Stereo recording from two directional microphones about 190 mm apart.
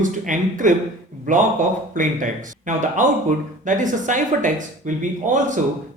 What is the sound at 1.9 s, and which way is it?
Speech, 45° right (ahead or behind).